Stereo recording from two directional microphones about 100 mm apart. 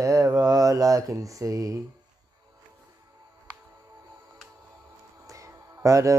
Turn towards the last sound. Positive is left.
turn(degrees=-30)  # may be behind; listen again after turning